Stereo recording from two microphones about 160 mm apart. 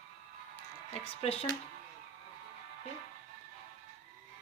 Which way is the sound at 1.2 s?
40° left (ahead or behind).